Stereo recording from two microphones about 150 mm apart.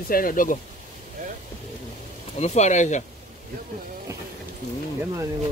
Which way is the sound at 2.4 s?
50° left (ahead or behind).